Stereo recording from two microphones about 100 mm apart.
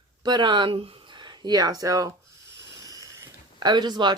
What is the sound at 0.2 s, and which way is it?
Speech, 50° right (ahead or behind).